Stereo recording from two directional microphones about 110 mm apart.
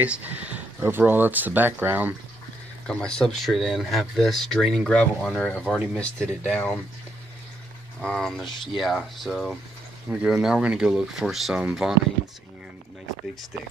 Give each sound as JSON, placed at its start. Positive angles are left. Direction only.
{"t": 0.0, "sound": "speech", "side_deg": -15}
{"t": 2.9, "sound": "speech", "side_deg": 10}
{"t": 8.0, "sound": "speech", "side_deg": 10}